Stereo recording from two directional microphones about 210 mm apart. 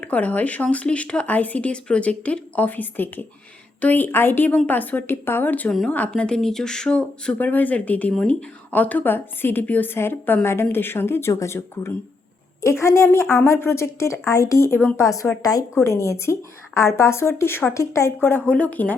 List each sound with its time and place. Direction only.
0.0 s a woman's voice: 5° left (ahead or behind)